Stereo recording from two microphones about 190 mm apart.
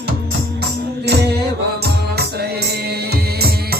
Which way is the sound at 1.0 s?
60° right (ahead or behind).